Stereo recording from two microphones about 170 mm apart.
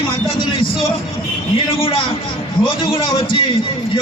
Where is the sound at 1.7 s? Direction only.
30° left (ahead or behind).